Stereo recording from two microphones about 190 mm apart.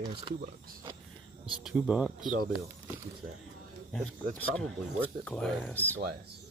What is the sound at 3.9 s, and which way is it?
Speech, 5° left (ahead or behind).